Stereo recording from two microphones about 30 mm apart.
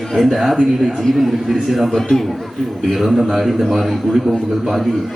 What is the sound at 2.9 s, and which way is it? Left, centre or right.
A man's voice, centre.